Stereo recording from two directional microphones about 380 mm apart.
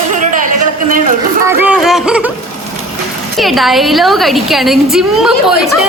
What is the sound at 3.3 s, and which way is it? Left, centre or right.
A woman's voice, centre.